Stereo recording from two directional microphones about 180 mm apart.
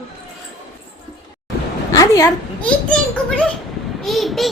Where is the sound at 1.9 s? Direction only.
20° left (ahead or behind).